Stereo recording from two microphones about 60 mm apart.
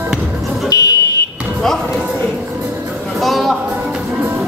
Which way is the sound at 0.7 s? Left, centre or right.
Left.